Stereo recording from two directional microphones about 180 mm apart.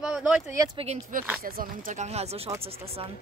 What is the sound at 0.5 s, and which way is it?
Speech, 20° right (ahead or behind).